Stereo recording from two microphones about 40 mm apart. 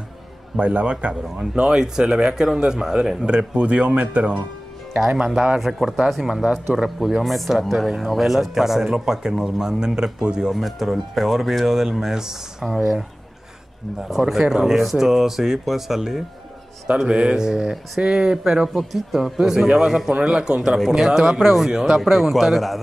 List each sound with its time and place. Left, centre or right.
0.6 s a man's voice: right
3.3 s speech: right
4.9 s speech: centre
5.2 s speech: right
5.6 s speech: centre
6.3 s speech: centre
10.5 s speech: centre
14.0 s speech: centre
17.1 s speech: right
17.5 s speech: centre
18.7 s speech: centre
22.0 s speech: centre